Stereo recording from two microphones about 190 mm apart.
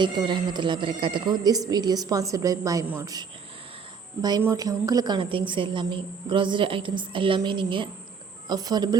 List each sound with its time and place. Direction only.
0.0 s a woman's voice: 25° right (ahead or behind)